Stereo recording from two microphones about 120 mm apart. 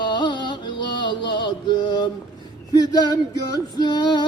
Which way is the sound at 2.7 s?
35° left (ahead or behind).